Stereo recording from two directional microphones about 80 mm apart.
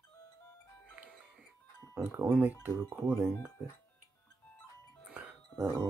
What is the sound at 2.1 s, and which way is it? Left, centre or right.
Speech, right.